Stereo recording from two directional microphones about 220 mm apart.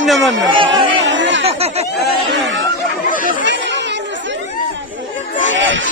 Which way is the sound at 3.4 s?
55° right (ahead or behind).